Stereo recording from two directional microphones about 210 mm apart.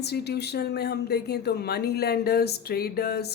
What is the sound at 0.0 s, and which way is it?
Speech, 50° left (ahead or behind).